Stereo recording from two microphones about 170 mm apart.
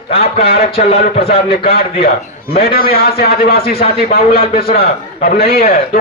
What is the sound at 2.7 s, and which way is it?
A man's voice, 65° left (ahead or behind).